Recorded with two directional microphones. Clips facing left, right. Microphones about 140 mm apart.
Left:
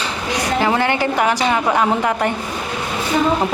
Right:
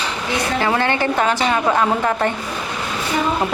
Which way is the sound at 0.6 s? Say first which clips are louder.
Even; 15° left (ahead or behind).